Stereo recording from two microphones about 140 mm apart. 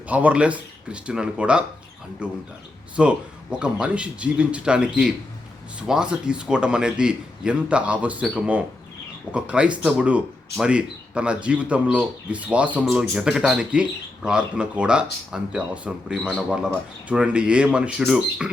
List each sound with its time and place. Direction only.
0.1 s speech: 10° right (ahead or behind)